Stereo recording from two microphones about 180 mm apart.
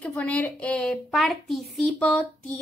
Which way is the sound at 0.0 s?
10° left (ahead or behind).